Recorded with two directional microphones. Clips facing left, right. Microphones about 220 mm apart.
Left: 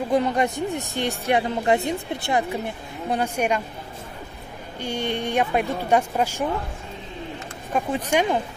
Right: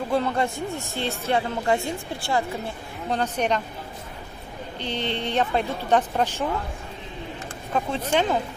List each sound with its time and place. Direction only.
0.1 s a woman's voice: 15° left (ahead or behind)
4.7 s a woman's voice: 10° left (ahead or behind)
7.7 s a woman's voice: 15° left (ahead or behind)